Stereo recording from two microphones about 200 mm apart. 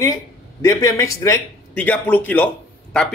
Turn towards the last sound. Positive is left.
turn(degrees=5)  # may be behind; listen again after turning